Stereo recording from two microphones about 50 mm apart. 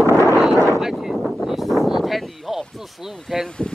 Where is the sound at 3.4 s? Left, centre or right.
Centre.